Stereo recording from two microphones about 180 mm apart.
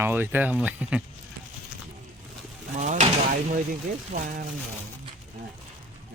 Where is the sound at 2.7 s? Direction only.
40° right (ahead or behind).